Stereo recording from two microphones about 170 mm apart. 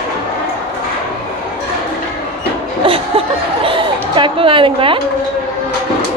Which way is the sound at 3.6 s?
30° right (ahead or behind).